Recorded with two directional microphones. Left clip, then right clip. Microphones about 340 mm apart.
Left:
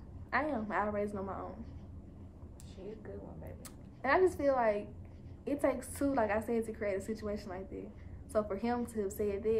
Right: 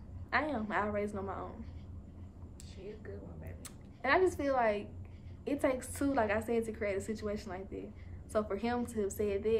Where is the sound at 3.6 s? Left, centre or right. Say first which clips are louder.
Right 1 dB; centre.